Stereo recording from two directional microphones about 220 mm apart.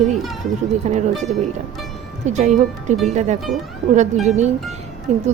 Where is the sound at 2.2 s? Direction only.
30° right (ahead or behind).